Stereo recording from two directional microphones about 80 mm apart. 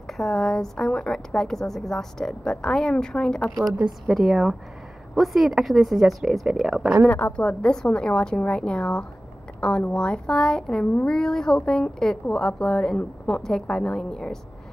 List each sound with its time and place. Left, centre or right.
0.2 s a woman's voice: centre
7.1 s a woman's voice: left
7.4 s a woman's voice: centre